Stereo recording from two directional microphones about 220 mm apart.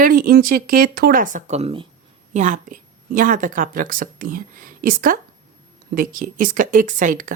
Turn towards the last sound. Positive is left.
turn(degrees=-35)  # may be behind; listen again after turning